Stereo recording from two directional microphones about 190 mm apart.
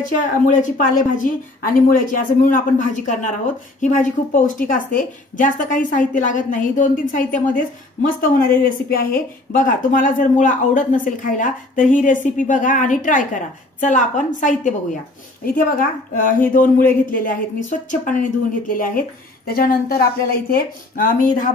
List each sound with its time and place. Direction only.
0.2 s a woman's voice: 45° left (ahead or behind)